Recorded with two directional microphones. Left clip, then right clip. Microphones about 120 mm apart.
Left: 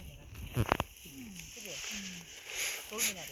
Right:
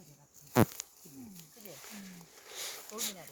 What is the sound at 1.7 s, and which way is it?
Wild animals, 35° right (ahead or behind).